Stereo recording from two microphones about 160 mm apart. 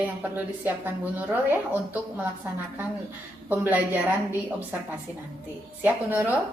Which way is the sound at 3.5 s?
10° right (ahead or behind).